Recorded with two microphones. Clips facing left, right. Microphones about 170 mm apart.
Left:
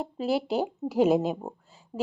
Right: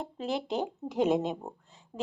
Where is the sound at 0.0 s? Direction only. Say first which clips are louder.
Left 6 dB; 5° left (ahead or behind).